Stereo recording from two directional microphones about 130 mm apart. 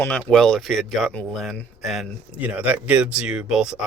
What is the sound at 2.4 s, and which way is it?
Speech, 10° right (ahead or behind).